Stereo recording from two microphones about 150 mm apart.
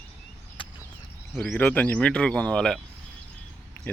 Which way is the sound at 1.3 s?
5° left (ahead or behind).